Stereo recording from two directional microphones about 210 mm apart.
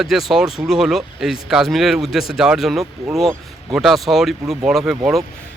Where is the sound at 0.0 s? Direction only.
Centre (ahead or behind).